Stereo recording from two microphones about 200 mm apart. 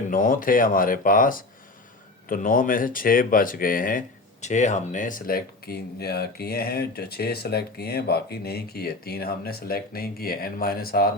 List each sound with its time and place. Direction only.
0.1 s speech: 45° left (ahead or behind)